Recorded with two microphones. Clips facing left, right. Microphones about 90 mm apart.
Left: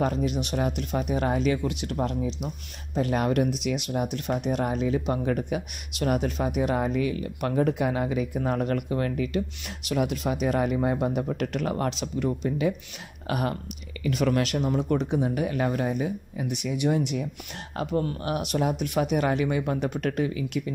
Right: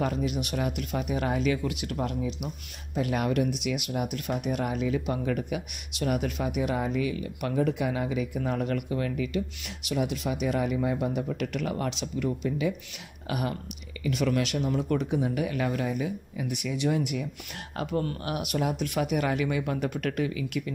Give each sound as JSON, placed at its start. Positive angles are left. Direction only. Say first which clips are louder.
{"t": 0.0, "sound": "speech", "louder": "left 3 dB", "side_deg": 35}
{"t": 14.8, "sound": "speech", "louder": "left 1 dB", "side_deg": 25}
{"t": 16.4, "sound": "speech", "louder": "left 2 dB", "side_deg": 20}